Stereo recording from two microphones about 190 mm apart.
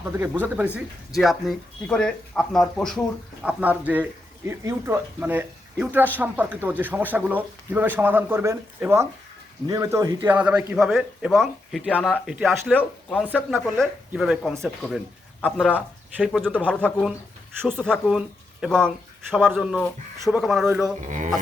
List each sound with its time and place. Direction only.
0.0 s speech: 15° right (ahead or behind); by 13.2 s 5° left (ahead or behind)
13.2 s speech: 5° right (ahead or behind)
21.1 s speech: 40° right (ahead or behind)